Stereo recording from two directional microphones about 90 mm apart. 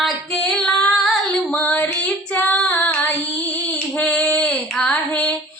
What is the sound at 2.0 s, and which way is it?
Child singing, 15° left (ahead or behind).